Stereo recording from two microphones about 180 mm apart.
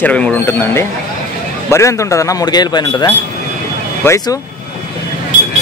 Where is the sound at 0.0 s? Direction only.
10° left (ahead or behind).